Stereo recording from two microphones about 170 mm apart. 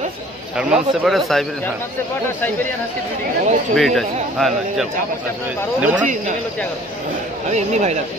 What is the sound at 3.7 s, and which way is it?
Speech, centre (ahead or behind).